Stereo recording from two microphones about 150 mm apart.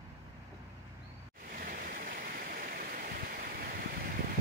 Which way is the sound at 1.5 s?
70° right (ahead or behind).